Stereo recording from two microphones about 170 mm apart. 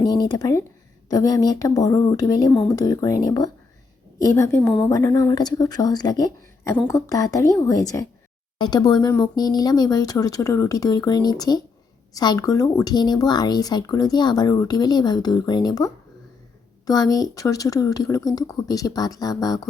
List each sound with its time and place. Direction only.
0.0 s a woman's voice: 25° left (ahead or behind)